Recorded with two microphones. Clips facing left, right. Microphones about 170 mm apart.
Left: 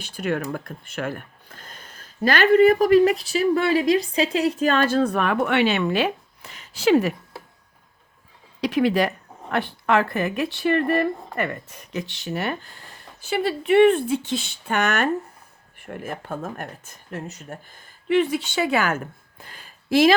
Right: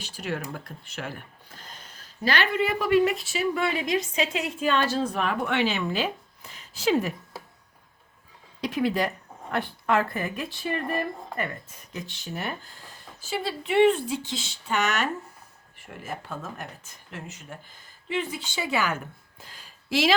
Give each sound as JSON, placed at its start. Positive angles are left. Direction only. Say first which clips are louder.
{"t": 0.0, "sound": "speech", "louder": "left 7 dB", "side_deg": 55}
{"t": 2.2, "sound": "a woman's voice", "louder": "left 10 dB", "side_deg": 45}
{"t": 8.6, "sound": "speech", "louder": "left 5 dB", "side_deg": 75}
{"t": 13.2, "sound": "a woman's voice", "louder": "left 7 dB", "side_deg": 65}
{"t": 18.1, "sound": "speech", "louder": "left 10 dB", "side_deg": 70}
{"t": 19.4, "sound": "a sound", "louder": "left 6 dB", "side_deg": 55}